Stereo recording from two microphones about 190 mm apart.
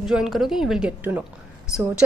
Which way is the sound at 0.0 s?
5° right (ahead or behind).